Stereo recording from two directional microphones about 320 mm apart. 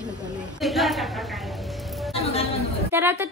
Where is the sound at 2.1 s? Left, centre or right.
Centre.